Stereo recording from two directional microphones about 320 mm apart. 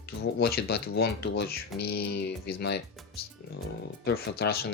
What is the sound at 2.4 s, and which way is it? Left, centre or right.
Speech, left.